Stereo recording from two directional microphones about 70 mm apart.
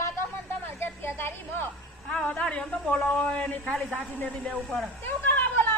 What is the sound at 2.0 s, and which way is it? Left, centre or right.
A woman's voice, centre.